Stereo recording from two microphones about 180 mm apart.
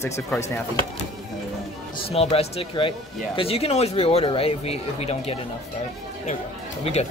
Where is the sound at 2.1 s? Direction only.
35° left (ahead or behind).